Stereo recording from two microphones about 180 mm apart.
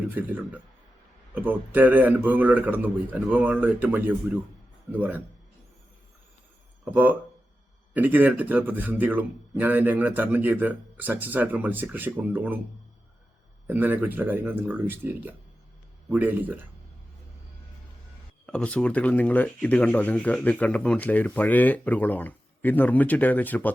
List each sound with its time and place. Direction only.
0.1 s speech: 10° right (ahead or behind)
6.9 s speech: 10° right (ahead or behind)
13.7 s speech: 10° right (ahead or behind)
18.4 s speech: 5° left (ahead or behind)